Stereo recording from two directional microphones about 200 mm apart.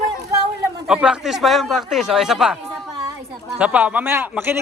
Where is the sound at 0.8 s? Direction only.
5° right (ahead or behind).